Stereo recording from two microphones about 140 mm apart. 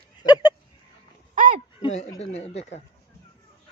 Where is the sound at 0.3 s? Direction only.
30° left (ahead or behind).